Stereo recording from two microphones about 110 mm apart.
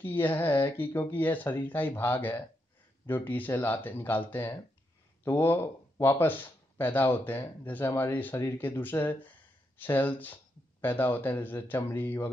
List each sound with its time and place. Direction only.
0.0 s speech: 15° left (ahead or behind)